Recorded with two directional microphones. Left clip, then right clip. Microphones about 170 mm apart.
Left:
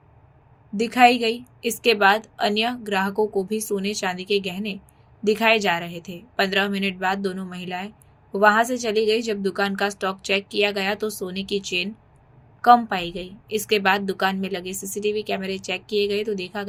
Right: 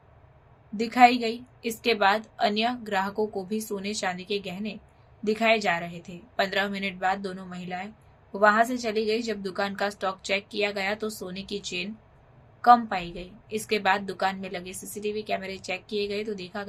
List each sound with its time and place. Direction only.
0.8 s a woman's voice: 20° left (ahead or behind)